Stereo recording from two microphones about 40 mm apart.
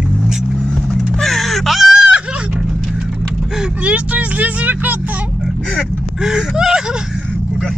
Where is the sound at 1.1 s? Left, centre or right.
Centre.